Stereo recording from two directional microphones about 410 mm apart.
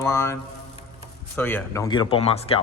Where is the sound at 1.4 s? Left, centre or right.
Centre.